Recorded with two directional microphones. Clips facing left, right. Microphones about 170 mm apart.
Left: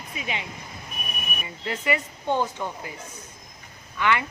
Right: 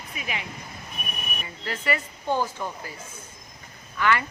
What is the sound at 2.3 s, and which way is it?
Speech, 5° right (ahead or behind).